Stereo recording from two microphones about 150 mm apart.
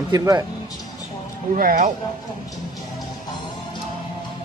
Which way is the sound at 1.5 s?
60° right (ahead or behind).